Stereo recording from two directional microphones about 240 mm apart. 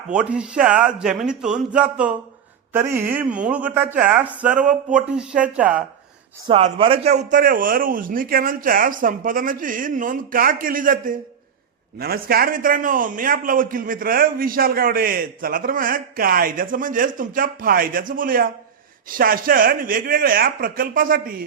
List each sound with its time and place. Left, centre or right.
0.1 s speech: centre
6.5 s a man's voice: right